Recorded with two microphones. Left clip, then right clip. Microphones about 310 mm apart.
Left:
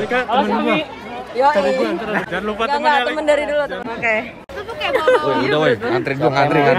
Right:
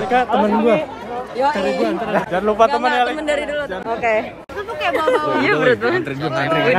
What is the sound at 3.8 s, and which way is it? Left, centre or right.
Speech, centre.